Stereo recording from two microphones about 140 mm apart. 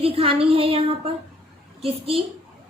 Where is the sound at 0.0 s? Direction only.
40° right (ahead or behind).